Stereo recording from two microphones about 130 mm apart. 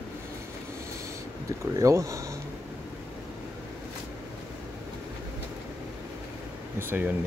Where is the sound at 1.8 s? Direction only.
25° right (ahead or behind).